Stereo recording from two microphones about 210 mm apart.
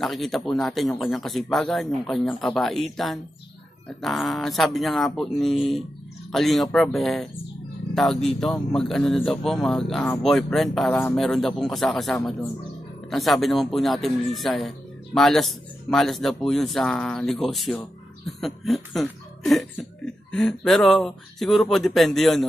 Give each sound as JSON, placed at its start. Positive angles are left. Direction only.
{"t": 0.0, "sound": "speech", "side_deg": 0}